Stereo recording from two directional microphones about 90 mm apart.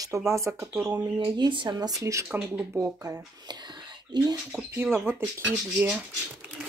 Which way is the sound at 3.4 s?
55° right (ahead or behind).